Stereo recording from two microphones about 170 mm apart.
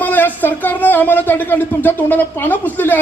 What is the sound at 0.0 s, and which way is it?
Speech, 10° left (ahead or behind).